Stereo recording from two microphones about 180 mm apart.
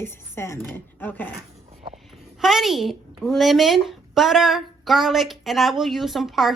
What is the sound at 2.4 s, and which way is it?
Speech, centre (ahead or behind).